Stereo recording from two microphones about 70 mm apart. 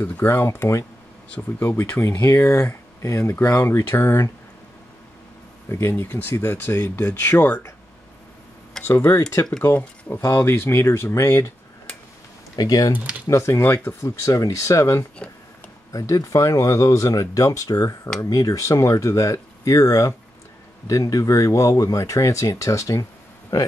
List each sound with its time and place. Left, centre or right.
0.0 s speech: left
1.6 s speech: left
2.0 s speech: left
3.6 s speech: left
5.7 s speech: left
8.8 s speech: left
12.5 s speech: left
13.3 s speech: left